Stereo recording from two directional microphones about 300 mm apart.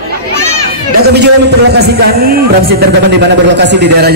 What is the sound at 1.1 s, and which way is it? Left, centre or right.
A man's voice, right.